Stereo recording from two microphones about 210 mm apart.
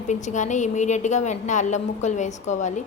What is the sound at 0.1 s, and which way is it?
A woman's voice, 35° left (ahead or behind).